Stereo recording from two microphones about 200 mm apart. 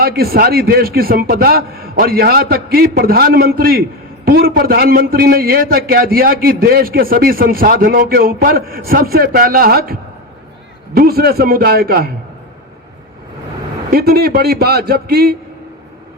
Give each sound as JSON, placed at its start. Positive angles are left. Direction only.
{"t": 0.0, "sound": "a man's voice", "side_deg": -50}
{"t": 13.9, "sound": "a man's voice", "side_deg": -50}